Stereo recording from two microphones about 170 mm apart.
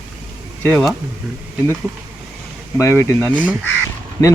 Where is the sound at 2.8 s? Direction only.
15° left (ahead or behind).